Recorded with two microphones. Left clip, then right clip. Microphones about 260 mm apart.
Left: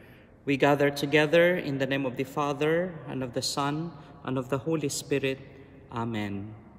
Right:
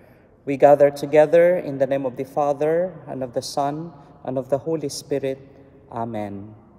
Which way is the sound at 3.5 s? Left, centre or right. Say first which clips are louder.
Right 6 dB; left.